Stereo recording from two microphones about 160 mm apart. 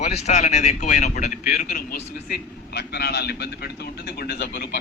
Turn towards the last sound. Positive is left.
turn(degrees=90)